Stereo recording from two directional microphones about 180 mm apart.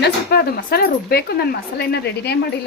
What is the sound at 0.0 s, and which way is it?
A woman's voice, 60° left (ahead or behind).